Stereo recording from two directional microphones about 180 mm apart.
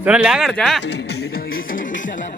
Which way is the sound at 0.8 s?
65° left (ahead or behind).